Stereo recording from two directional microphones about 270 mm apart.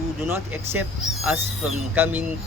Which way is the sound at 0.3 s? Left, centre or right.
Centre.